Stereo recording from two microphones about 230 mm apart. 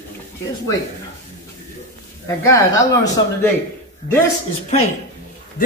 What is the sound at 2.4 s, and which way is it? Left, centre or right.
Speech, centre.